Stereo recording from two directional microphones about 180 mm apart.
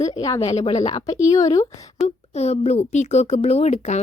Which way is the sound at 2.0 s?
35° left (ahead or behind).